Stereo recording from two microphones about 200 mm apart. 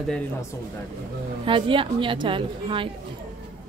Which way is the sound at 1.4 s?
25° right (ahead or behind).